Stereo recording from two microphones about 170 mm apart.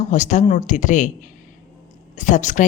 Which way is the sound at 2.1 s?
45° left (ahead or behind).